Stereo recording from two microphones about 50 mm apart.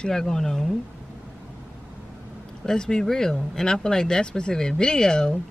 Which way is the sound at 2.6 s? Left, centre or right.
Centre.